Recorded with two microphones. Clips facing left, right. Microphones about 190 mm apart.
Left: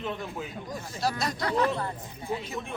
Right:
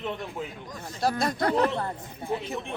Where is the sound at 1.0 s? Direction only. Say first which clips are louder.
Right 4 dB; 55° right (ahead or behind).